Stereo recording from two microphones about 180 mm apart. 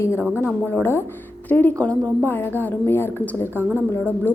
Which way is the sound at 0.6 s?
10° left (ahead or behind).